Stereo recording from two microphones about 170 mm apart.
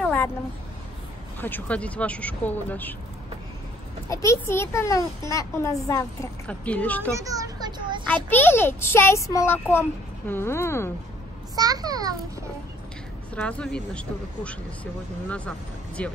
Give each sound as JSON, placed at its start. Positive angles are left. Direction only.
{"t": 0.0, "sound": "a sound", "side_deg": 10}
{"t": 1.4, "sound": "a child's voice", "side_deg": 10}
{"t": 4.1, "sound": "a child's voice", "side_deg": 20}
{"t": 7.2, "sound": "a sound", "side_deg": -20}
{"t": 8.3, "sound": "a child's voice", "side_deg": 10}
{"t": 11.5, "sound": "a child's voice", "side_deg": -20}
{"t": 13.3, "sound": "a child's voice", "side_deg": 5}